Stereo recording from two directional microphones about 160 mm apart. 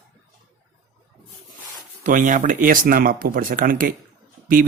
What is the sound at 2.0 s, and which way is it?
Speech, 55° right (ahead or behind).